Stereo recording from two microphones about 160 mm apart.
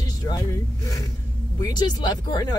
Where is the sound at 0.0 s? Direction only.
25° left (ahead or behind).